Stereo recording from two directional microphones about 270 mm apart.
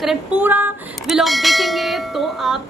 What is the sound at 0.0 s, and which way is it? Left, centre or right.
Music, centre.